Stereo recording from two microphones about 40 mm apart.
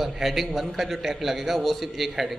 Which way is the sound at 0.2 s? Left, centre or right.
Centre.